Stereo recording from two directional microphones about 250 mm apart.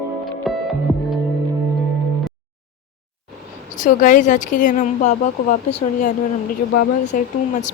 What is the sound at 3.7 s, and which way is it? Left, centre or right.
Speech, left.